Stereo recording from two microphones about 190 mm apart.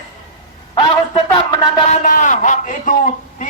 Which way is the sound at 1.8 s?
40° left (ahead or behind).